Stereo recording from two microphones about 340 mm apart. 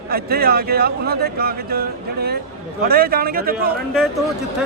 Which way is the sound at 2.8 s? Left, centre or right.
Right.